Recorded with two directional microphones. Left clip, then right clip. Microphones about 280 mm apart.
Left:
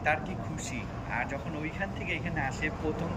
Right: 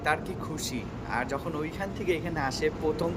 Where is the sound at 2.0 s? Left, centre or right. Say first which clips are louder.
Right 6 dB; centre.